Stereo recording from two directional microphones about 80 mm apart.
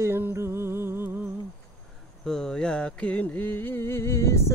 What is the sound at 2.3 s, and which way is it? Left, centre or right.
Music, centre.